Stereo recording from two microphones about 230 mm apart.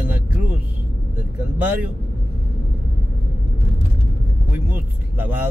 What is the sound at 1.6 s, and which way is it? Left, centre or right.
Speech, centre.